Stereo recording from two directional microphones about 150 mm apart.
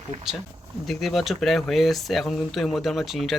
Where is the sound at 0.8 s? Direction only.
Centre (ahead or behind).